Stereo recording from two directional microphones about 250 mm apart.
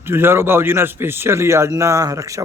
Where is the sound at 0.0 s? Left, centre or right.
Centre.